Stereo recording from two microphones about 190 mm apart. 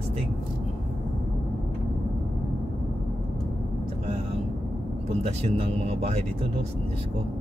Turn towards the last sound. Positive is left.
turn(degrees=-35)  # may be behind; listen again after turning